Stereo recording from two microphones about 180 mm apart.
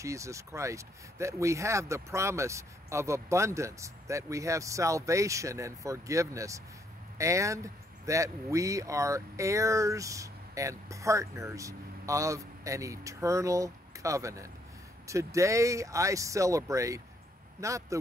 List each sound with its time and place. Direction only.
0.0 s speech: 15° right (ahead or behind)